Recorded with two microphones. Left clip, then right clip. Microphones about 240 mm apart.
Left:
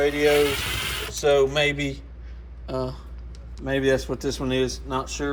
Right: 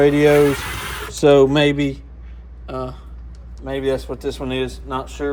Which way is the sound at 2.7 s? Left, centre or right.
Centre.